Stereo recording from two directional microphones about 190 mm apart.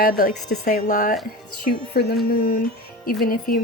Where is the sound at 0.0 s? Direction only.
45° left (ahead or behind).